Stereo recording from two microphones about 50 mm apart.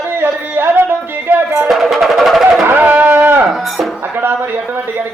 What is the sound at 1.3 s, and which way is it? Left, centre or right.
Music, right.